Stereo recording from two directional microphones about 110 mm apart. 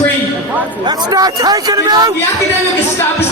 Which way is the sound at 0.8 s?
35° right (ahead or behind).